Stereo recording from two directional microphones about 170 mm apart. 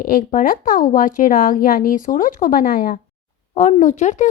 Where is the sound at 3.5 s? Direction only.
45° left (ahead or behind).